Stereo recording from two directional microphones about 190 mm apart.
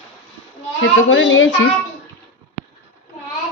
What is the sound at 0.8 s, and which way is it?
Speech, 85° left.